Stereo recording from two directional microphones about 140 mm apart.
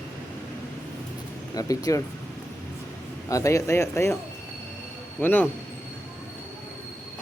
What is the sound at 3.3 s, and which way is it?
Speech, 20° left (ahead or behind).